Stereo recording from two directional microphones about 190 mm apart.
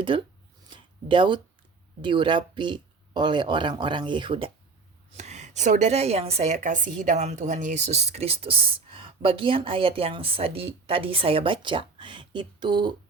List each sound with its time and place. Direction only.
0.1 s a woman's voice: 25° right (ahead or behind)
0.7 s a sound: 25° right (ahead or behind)
2.0 s a woman's voice: 25° right (ahead or behind)
5.1 s a woman's voice: 35° right (ahead or behind)